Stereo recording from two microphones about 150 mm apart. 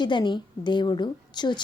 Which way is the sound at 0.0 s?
30° left (ahead or behind).